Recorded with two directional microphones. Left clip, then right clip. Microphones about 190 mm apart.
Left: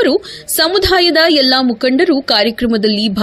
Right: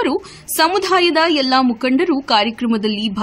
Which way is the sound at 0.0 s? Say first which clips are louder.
Left 6 dB; 15° left (ahead or behind).